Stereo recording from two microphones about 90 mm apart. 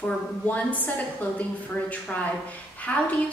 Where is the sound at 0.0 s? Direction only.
15° left (ahead or behind).